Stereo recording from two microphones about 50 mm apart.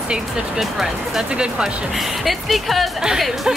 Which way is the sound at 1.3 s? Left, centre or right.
Centre.